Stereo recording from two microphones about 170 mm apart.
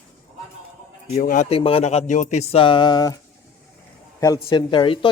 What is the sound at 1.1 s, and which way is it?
Speech, 55° left (ahead or behind).